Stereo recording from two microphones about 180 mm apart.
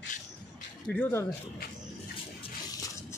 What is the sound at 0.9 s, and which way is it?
Speech, 10° left (ahead or behind).